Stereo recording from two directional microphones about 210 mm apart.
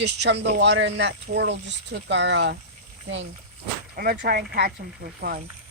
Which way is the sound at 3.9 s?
45° right (ahead or behind).